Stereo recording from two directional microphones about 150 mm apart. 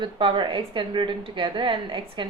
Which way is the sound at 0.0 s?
35° right (ahead or behind).